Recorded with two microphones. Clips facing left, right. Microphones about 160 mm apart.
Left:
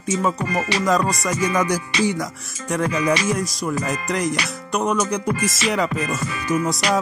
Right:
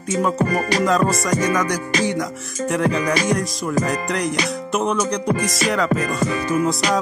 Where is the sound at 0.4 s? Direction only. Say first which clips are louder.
Right 4 dB; 45° right (ahead or behind).